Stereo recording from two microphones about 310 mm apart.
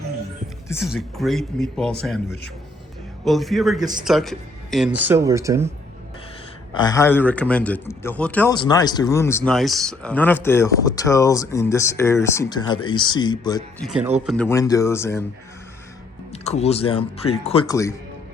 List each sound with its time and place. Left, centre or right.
0.7 s speech: centre
6.7 s a man's voice: centre
16.3 s speech: left